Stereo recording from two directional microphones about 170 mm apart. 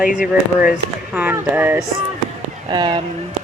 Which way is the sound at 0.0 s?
50° left (ahead or behind).